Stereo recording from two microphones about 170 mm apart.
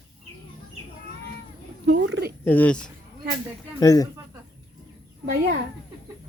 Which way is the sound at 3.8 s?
20° left (ahead or behind).